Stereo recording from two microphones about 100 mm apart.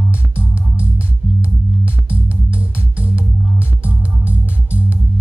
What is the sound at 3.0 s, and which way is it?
Music, 15° right (ahead or behind).